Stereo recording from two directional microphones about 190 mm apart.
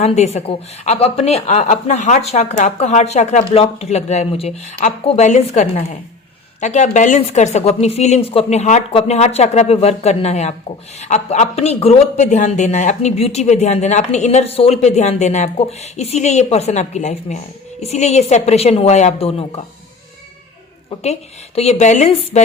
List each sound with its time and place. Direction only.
0.0 s speech: 35° left (ahead or behind)
21.0 s speech: 35° left (ahead or behind)